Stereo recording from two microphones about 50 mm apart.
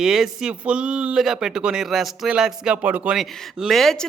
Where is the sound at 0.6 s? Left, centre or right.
Right.